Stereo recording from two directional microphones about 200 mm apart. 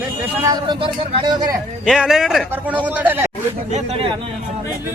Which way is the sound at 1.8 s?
5° right (ahead or behind).